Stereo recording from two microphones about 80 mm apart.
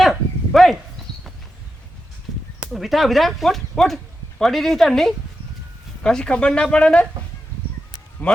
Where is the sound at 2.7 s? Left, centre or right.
Centre.